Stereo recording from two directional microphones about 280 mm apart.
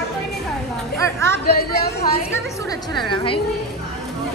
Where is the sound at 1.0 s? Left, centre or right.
Centre.